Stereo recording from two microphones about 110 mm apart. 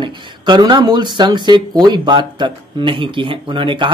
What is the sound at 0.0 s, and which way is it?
Speech, 45° right (ahead or behind).